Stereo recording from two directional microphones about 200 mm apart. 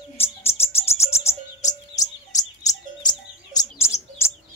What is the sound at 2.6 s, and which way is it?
Chirp, 20° left (ahead or behind).